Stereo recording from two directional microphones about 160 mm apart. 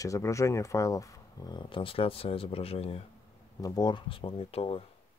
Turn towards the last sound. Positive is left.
turn(degrees=35)  # may be behind; listen again after turning